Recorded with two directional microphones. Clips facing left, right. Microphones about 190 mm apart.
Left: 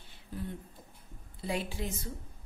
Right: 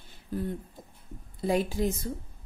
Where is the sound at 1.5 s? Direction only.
40° right (ahead or behind).